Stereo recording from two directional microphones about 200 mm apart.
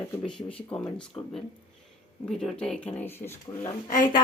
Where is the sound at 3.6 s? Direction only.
40° left (ahead or behind).